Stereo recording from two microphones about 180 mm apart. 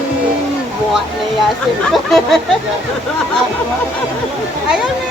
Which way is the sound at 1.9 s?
Centre (ahead or behind).